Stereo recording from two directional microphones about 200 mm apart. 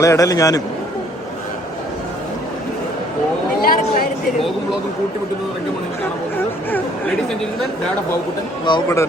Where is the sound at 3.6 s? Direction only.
45° left (ahead or behind).